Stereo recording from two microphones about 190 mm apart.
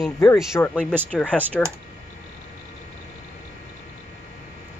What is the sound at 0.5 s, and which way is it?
Speech, 10° left (ahead or behind).